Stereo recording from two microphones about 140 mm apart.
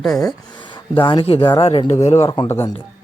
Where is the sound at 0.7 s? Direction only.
35° left (ahead or behind).